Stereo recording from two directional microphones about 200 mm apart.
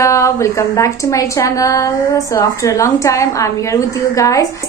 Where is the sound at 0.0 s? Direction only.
15° left (ahead or behind).